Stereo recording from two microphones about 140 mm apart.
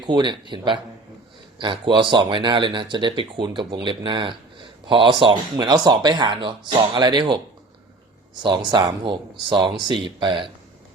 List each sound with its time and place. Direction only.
0.1 s speech: 35° right (ahead or behind)
8.4 s speech: 30° right (ahead or behind)